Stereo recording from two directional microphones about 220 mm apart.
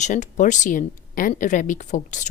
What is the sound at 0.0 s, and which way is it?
A woman's voice, 35° left (ahead or behind).